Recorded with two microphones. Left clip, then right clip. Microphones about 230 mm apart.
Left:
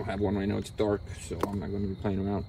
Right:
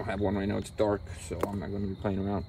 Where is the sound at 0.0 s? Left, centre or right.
Right.